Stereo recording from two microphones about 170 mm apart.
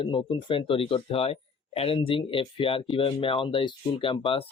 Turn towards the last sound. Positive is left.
turn(degrees=30)  # may be behind; listen again after turning